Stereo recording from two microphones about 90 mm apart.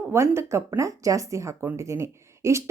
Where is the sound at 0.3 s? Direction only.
30° right (ahead or behind).